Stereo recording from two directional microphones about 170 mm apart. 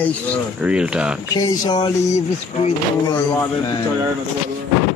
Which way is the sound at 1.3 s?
25° left (ahead or behind).